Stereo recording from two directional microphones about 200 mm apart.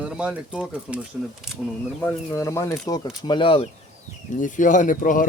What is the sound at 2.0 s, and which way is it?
Speech, 15° left (ahead or behind).